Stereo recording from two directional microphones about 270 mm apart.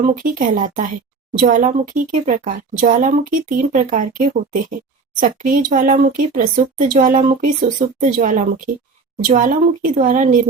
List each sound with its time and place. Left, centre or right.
0.0 s speech: right